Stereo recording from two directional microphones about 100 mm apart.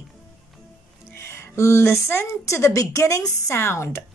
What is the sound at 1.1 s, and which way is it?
A woman's voice, 25° left (ahead or behind).